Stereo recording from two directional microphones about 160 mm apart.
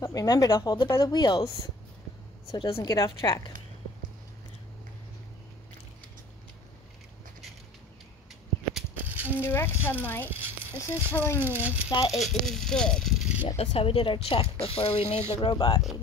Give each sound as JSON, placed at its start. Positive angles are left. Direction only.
{"t": 0.0, "sound": "speech", "side_deg": 20}
{"t": 0.8, "sound": "speech", "side_deg": 15}
{"t": 2.5, "sound": "speech", "side_deg": 30}
{"t": 8.7, "sound": "rattle", "side_deg": -10}
{"t": 9.4, "sound": "speech", "side_deg": 15}
{"t": 10.3, "sound": "a sound", "side_deg": -15}
{"t": 11.1, "sound": "speech", "side_deg": 10}
{"t": 11.4, "sound": "speech", "side_deg": -10}
{"t": 13.6, "sound": "speech", "side_deg": 35}
{"t": 15.5, "sound": "speech", "side_deg": 30}